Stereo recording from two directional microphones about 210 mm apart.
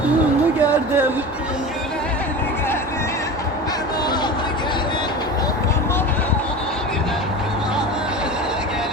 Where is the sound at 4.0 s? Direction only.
20° left (ahead or behind).